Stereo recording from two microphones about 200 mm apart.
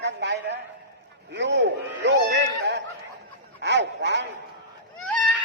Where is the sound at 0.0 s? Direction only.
60° right (ahead or behind).